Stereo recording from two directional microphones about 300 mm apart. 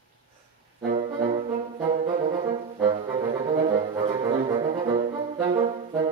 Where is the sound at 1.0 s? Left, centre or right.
Right.